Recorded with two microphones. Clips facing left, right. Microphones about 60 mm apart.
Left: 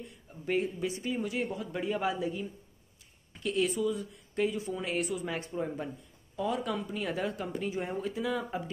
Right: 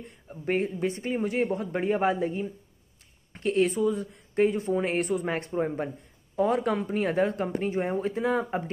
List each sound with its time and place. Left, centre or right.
0.0 s speech: right